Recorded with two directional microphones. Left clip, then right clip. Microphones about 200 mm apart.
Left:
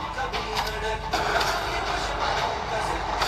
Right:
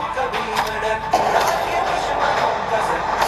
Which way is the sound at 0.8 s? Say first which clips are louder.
Right 8 dB; 20° right (ahead or behind).